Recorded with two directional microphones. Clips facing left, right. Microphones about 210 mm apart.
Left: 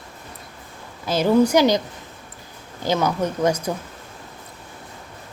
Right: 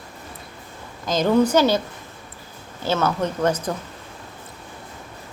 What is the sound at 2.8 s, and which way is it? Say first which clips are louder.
Speech: left 1 dB; 15° left (ahead or behind).